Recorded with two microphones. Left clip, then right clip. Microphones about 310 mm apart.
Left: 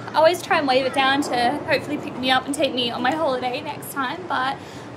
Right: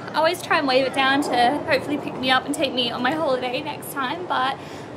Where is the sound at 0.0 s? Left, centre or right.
Centre.